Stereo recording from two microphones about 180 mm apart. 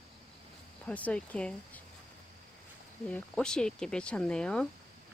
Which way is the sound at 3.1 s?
5° left (ahead or behind).